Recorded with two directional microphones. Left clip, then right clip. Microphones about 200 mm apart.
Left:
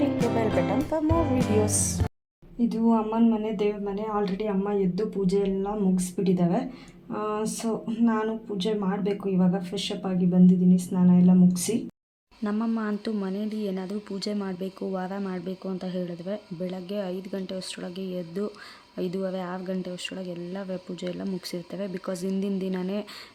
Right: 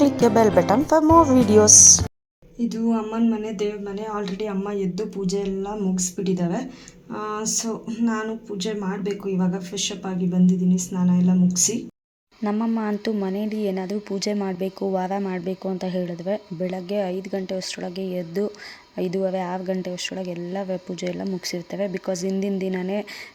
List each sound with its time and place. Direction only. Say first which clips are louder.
0.1 s speech: right 8 dB; centre (ahead or behind)
1.7 s speech: right 19 dB; 25° left (ahead or behind)
2.6 s speech: even; centre (ahead or behind)